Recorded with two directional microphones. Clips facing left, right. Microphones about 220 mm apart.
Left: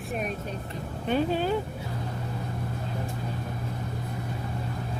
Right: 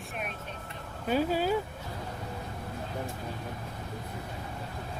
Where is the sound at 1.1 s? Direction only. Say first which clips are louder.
Left 2 dB; 5° right (ahead or behind).